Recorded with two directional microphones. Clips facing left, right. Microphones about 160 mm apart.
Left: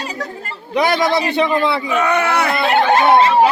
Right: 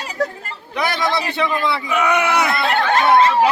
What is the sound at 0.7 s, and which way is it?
A man's voice, 20° left (ahead or behind).